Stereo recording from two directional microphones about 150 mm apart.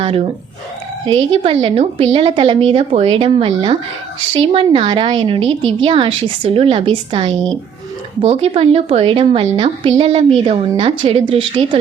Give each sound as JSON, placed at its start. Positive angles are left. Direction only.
{"t": 0.0, "sound": "a woman's voice", "side_deg": -40}